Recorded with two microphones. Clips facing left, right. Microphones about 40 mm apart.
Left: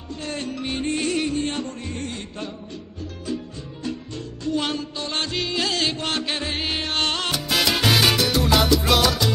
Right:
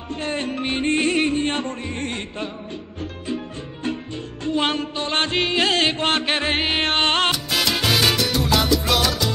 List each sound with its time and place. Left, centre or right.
0.1 s music: right
3.3 s music: right
7.3 s salsa music: centre